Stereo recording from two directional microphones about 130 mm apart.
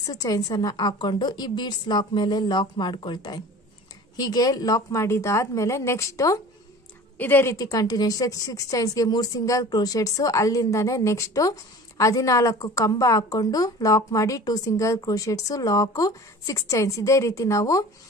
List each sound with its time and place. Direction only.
0.0 s a woman's voice: 30° left (ahead or behind)